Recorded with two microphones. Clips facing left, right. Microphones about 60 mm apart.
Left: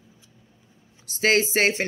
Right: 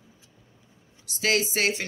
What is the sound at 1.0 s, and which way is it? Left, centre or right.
Speech, left.